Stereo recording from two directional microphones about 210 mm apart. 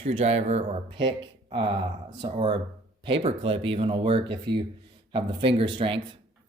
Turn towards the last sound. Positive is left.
turn(degrees=-25)  # may be behind; listen again after turning